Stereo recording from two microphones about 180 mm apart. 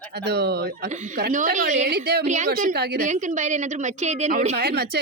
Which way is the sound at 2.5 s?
60° right (ahead or behind).